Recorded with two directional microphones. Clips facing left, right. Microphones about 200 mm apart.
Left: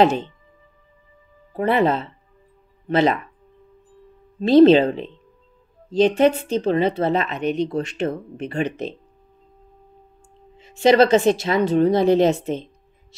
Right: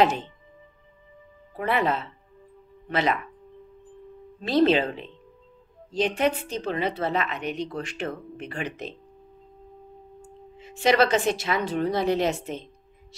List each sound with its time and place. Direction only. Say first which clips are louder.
0.0 s a woman's voice: left 5 dB; 25° left (ahead or behind)
1.6 s a woman's voice: left 6 dB; 30° left (ahead or behind)
4.4 s a woman's voice: left 9 dB; 30° left (ahead or behind)
10.8 s a woman's voice: left 7 dB; 25° left (ahead or behind)